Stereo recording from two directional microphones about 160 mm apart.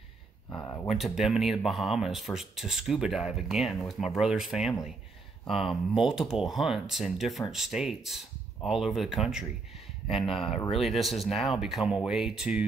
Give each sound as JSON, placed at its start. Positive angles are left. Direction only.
{"t": 0.6, "sound": "speech", "side_deg": 20}
{"t": 0.8, "sound": "speech", "side_deg": 0}